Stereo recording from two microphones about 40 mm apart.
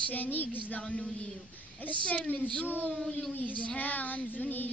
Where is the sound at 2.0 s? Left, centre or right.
Left.